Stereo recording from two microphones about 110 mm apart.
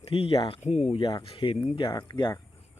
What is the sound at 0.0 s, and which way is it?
Speech, 60° left (ahead or behind).